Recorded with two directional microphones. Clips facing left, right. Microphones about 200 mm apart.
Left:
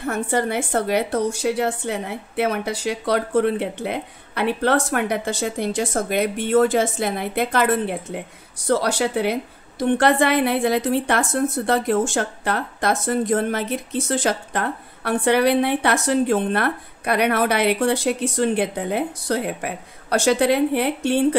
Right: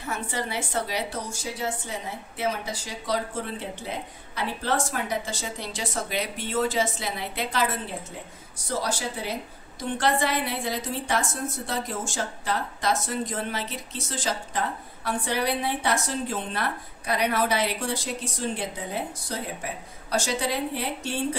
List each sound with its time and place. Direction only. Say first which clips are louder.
0.0 s a woman's voice: left 9 dB; 55° left (ahead or behind)